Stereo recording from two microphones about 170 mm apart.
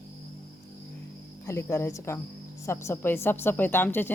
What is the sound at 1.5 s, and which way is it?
Speech, 15° left (ahead or behind).